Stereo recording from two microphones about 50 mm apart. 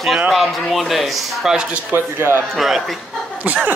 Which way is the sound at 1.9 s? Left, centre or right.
Right.